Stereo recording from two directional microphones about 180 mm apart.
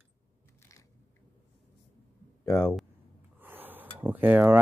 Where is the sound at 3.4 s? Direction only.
10° right (ahead or behind).